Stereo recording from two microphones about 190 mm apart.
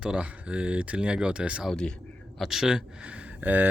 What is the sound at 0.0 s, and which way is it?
Speech, 5° right (ahead or behind).